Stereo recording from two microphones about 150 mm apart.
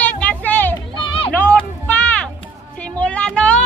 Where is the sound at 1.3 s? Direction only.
10° left (ahead or behind).